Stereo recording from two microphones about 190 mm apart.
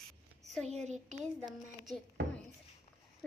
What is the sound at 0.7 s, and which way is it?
Speech, 35° right (ahead or behind).